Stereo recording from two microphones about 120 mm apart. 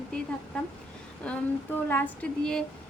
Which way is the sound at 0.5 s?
5° left (ahead or behind).